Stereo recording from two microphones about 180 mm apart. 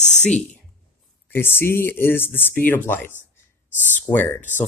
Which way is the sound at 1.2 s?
10° left (ahead or behind).